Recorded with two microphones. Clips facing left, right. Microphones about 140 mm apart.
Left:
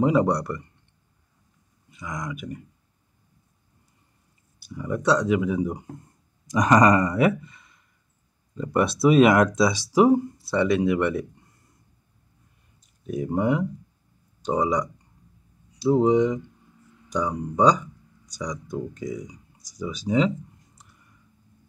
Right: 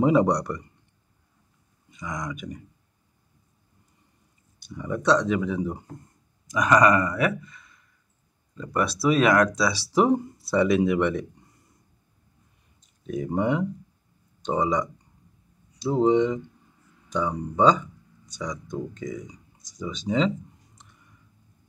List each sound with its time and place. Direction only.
0.0 s speech: centre (ahead or behind)
1.9 s speech: 5° left (ahead or behind)
4.6 s speech: 5° left (ahead or behind)
6.7 s speech: 30° left (ahead or behind); by 11.2 s centre (ahead or behind)
13.0 s speech: 10° left (ahead or behind)
18.9 s a sound: 10° left (ahead or behind)